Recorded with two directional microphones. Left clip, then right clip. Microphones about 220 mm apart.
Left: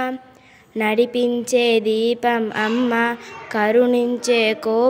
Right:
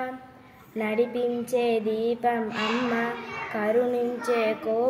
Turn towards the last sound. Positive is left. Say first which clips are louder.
# left 7 dB
turn(degrees=50)  # may be behind; listen again after turning